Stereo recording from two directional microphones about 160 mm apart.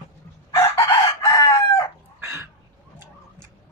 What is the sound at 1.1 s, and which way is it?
Chicken, 20° left (ahead or behind).